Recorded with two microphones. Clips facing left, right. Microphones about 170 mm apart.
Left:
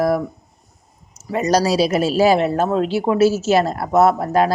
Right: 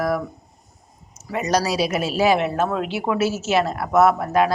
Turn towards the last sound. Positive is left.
turn(degrees=35)  # may be behind; listen again after turning